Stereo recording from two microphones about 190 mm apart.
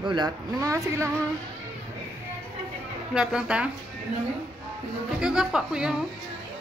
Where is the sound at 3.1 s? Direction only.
5° right (ahead or behind).